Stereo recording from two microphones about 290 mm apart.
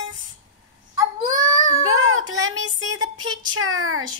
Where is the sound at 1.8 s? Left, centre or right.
Right.